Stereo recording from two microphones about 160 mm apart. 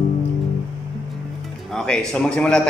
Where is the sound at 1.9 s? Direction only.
5° left (ahead or behind).